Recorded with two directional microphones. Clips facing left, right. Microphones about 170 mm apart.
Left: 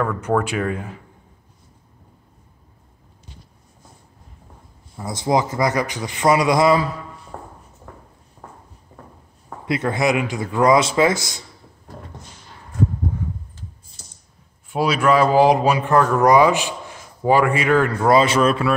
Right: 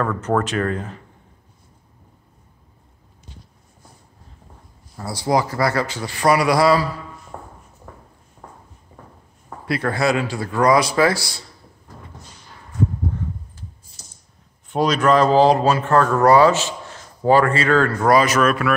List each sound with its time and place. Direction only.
0.0 s speech: 10° left (ahead or behind)
5.0 s a man's voice: 20° left (ahead or behind)
9.7 s a man's voice: 20° left (ahead or behind)
14.7 s speech: 10° left (ahead or behind); by 18.7 s 30° left (ahead or behind)